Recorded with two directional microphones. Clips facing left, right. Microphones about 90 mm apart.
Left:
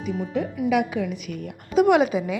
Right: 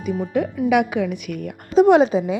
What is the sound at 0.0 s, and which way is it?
A woman's voice, 55° right (ahead or behind).